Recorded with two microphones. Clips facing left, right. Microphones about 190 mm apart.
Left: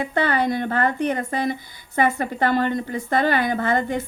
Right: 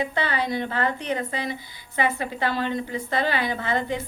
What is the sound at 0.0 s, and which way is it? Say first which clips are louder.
A woman's voice: left 5 dB; 50° left (ahead or behind).